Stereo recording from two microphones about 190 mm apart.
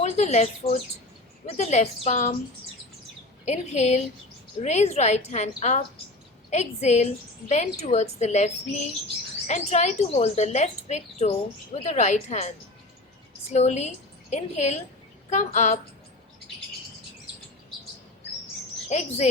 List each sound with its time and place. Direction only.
0.0 s a woman's voice: 35° left (ahead or behind)
3.4 s a woman's voice: 35° left (ahead or behind)
18.9 s a woman's voice: 35° left (ahead or behind)